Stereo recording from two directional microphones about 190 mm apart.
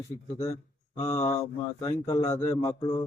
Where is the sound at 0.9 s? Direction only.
15° left (ahead or behind).